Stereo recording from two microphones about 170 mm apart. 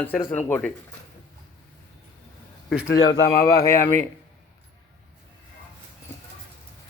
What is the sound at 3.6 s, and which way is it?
Speech, 15° left (ahead or behind).